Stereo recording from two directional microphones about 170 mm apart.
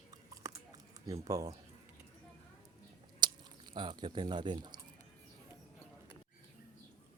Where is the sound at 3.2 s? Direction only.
25° right (ahead or behind).